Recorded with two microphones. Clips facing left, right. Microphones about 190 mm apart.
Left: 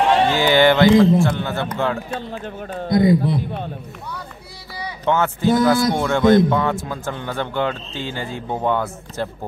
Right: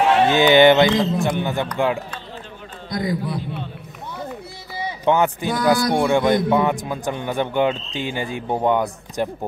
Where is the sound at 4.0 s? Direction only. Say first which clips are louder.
Right 1 dB; 20° right (ahead or behind).